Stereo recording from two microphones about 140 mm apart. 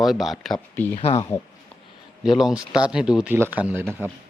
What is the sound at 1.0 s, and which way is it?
Speech, 45° left (ahead or behind).